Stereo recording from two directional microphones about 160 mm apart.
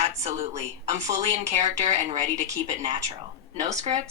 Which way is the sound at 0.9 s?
45° right (ahead or behind).